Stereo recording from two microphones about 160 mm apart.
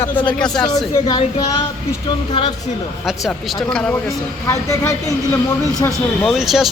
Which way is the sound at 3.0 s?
Centre (ahead or behind).